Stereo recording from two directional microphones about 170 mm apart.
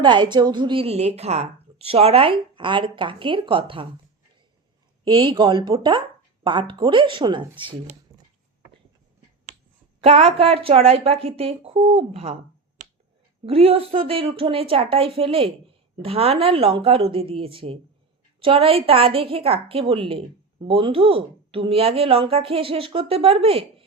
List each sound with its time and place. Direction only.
0.0 s a woman's voice: 25° right (ahead or behind)
5.0 s a woman's voice: 30° right (ahead or behind)
8.1 s a sound: 20° right (ahead or behind)
10.0 s a woman's voice: 35° right (ahead or behind)
13.4 s a woman's voice: 35° right (ahead or behind)